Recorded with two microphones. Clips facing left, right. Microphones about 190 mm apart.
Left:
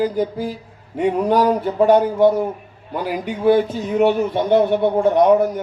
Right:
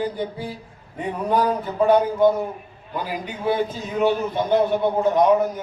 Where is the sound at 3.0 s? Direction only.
60° left (ahead or behind).